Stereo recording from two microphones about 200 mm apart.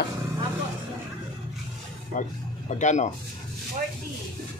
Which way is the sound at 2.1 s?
45° left (ahead or behind).